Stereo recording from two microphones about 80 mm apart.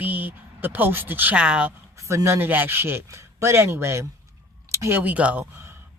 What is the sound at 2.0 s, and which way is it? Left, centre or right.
A woman's voice, right.